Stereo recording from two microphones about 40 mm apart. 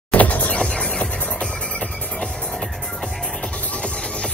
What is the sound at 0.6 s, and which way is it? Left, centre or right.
Music, left.